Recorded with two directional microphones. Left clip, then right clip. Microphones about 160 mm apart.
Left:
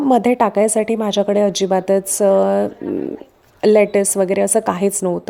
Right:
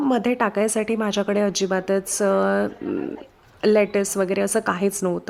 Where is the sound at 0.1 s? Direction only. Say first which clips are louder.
Left 10 dB; 20° left (ahead or behind).